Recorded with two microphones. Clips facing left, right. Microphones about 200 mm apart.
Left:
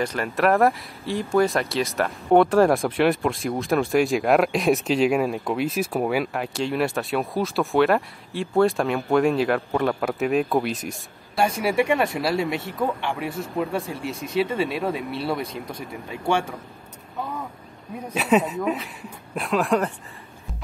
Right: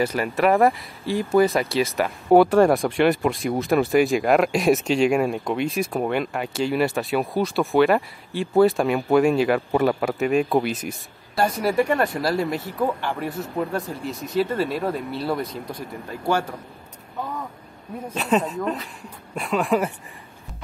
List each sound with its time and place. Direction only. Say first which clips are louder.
0.0 s speech: right 2 dB; 5° right (ahead or behind)
18.1 s speech: left 2 dB; 5° left (ahead or behind)